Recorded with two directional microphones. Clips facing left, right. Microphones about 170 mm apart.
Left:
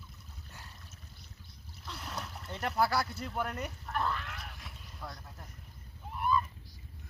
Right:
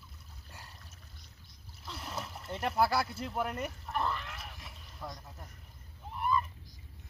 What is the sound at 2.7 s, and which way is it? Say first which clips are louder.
Speech: right 1 dB; 10° right (ahead or behind).